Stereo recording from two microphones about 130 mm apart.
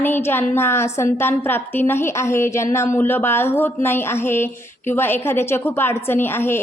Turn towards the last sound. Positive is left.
turn(degrees=20)  # may be behind; listen again after turning